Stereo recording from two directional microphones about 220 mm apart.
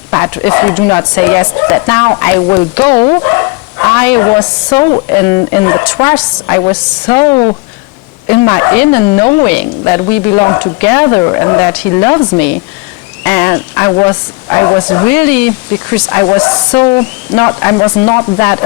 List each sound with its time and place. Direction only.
0.1 s speech: 15° left (ahead or behind)